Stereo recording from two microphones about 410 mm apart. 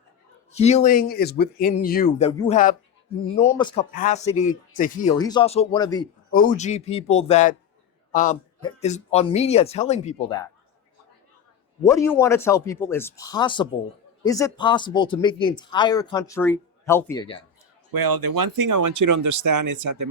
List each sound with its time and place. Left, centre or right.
0.5 s speech: centre
11.8 s speech: centre
17.9 s speech: right